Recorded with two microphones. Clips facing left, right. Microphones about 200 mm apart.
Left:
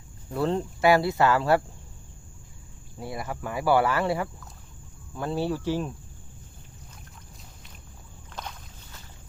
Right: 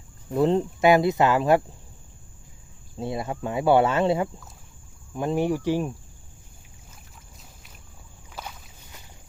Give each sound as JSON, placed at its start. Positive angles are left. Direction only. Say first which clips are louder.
{"t": 0.3, "sound": "speech", "louder": "right 5 dB", "side_deg": -20}
{"t": 3.0, "sound": "speech", "louder": "right 5 dB", "side_deg": -25}
{"t": 8.3, "sound": "boat", "louder": "even", "side_deg": -5}